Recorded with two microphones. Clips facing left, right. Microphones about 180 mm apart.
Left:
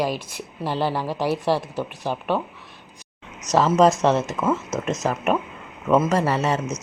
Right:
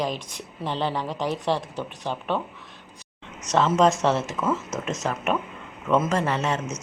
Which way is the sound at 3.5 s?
5° left (ahead or behind).